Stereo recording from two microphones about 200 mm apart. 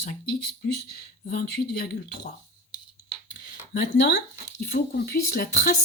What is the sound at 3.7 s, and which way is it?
Speech, 55° left (ahead or behind).